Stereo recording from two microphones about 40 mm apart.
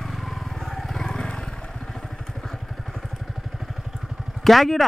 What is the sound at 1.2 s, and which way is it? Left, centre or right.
Vehicle, left.